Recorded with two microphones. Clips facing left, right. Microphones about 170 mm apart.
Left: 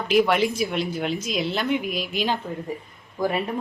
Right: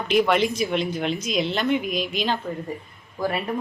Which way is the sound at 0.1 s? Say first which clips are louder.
Even; 5° left (ahead or behind).